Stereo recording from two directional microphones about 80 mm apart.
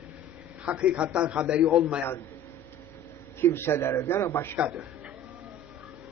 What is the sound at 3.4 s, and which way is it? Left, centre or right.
A man's voice, left.